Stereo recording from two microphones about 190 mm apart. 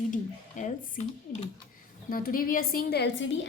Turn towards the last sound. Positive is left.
turn(degrees=70)  # may be behind; listen again after turning